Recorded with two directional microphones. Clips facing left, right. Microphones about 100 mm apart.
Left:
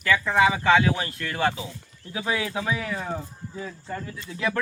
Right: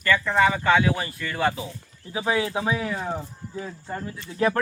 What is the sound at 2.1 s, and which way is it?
Speech, 25° right (ahead or behind).